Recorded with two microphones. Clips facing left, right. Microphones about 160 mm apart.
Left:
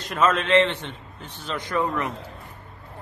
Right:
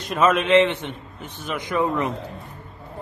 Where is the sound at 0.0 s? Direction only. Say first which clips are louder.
Right 3 dB; 15° right (ahead or behind).